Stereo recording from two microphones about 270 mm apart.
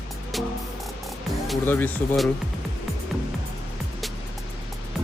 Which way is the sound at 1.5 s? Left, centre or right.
Centre.